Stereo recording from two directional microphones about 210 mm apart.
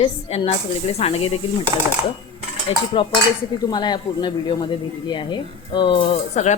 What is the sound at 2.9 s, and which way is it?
Speech, 25° left (ahead or behind).